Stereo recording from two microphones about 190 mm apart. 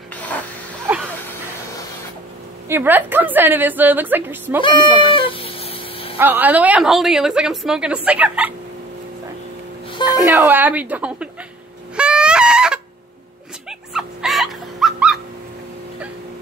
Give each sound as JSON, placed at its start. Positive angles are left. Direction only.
{"t": 0.1, "sound": "a sound", "side_deg": 10}
{"t": 0.9, "sound": "dog", "side_deg": -10}
{"t": 2.7, "sound": "a woman's voice", "side_deg": -10}
{"t": 4.6, "sound": "cat", "side_deg": 25}
{"t": 6.1, "sound": "a woman's voice", "side_deg": -10}
{"t": 10.2, "sound": "a woman's voice", "side_deg": -15}
{"t": 11.9, "sound": "goose", "side_deg": -5}
{"t": 13.7, "sound": "dog", "side_deg": 0}